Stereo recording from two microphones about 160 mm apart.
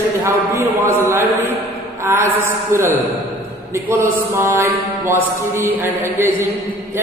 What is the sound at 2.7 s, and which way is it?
A man's voice, 15° right (ahead or behind).